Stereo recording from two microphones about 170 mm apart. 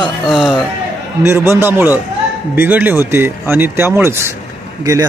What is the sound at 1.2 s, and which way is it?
A man's voice, 15° right (ahead or behind).